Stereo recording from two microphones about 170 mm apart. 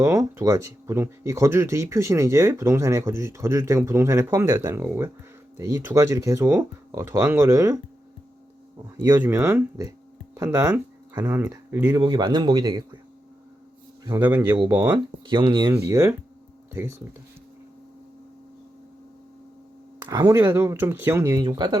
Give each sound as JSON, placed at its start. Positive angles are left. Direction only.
{"t": 0.0, "sound": "speech", "side_deg": -15}
{"t": 9.0, "sound": "a man's voice", "side_deg": -20}
{"t": 14.0, "sound": "speech", "side_deg": -20}
{"t": 15.3, "sound": "a man's voice", "side_deg": -30}
{"t": 15.9, "sound": "speech", "side_deg": -15}
{"t": 20.1, "sound": "speech", "side_deg": -20}
{"t": 21.4, "sound": "a man's voice", "side_deg": -25}